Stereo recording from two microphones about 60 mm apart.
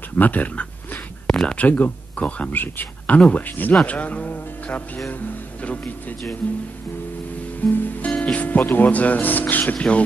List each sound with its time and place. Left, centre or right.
0.2 s speech: left
1.2 s a sound: centre
1.5 s speech: left
2.5 s speech: left
7.6 s speech: left